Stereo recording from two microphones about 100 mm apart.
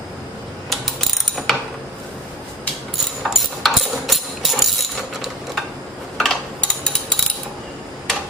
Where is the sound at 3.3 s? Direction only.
Centre (ahead or behind).